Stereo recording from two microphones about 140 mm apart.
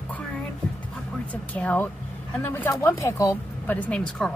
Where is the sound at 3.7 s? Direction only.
10° left (ahead or behind).